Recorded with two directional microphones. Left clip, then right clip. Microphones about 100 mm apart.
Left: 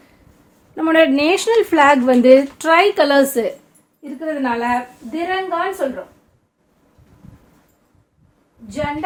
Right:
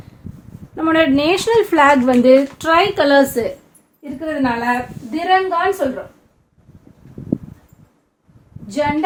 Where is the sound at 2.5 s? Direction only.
90° left.